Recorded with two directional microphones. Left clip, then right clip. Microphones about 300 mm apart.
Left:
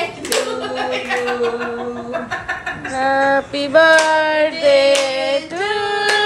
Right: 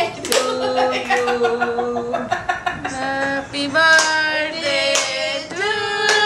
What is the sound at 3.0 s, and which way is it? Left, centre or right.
Female singing, centre.